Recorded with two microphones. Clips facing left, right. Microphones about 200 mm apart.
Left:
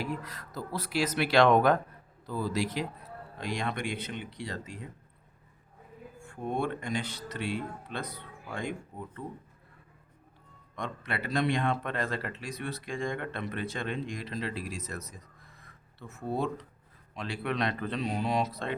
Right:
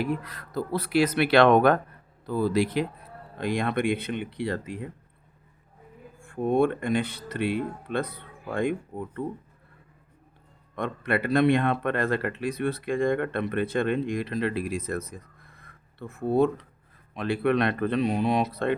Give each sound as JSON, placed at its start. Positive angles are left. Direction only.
{"t": 0.0, "sound": "speech", "side_deg": -60}
{"t": 6.2, "sound": "speech", "side_deg": -55}
{"t": 10.8, "sound": "speech", "side_deg": -55}